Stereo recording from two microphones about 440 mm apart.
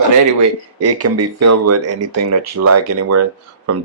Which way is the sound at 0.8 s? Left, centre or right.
Right.